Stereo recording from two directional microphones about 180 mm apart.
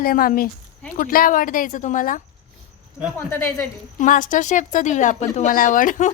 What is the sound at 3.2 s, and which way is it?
Speech, 15° left (ahead or behind).